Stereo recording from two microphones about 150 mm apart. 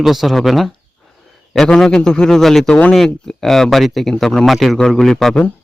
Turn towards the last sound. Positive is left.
turn(degrees=5)  # may be behind; listen again after turning